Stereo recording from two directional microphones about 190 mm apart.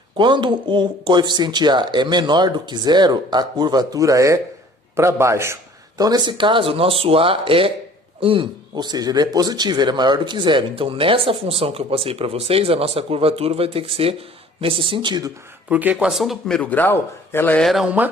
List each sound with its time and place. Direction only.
0.2 s a man's voice: 25° right (ahead or behind)
15.7 s a man's voice: 10° right (ahead or behind)